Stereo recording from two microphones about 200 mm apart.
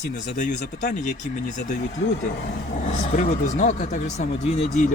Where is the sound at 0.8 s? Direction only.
40° left (ahead or behind).